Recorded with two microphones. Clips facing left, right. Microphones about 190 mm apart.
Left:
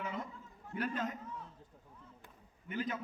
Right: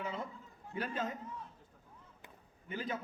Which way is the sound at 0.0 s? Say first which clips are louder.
Right 1 dB; 30° right (ahead or behind).